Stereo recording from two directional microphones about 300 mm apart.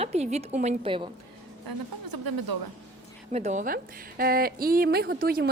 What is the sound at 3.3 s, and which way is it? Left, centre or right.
A woman's voice, right.